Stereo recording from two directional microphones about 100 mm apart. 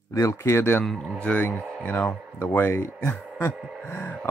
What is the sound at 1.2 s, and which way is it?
Speech, 15° left (ahead or behind).